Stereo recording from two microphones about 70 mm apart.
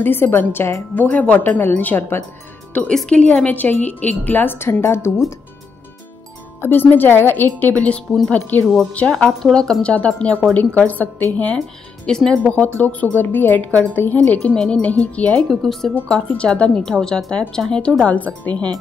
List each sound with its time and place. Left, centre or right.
0.0 s a woman's voice: left
1.0 s speech: centre
2.9 s a woman's voice: centre; by 5.2 s left
6.6 s speech: left
7.7 s speech: centre
8.9 s speech: centre
12.1 s speech: centre
12.4 s speech: left
15.6 s speech: centre
16.1 s speech: centre
18.0 s speech: left